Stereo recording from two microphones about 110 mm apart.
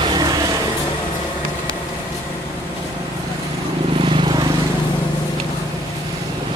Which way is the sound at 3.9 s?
50° right (ahead or behind).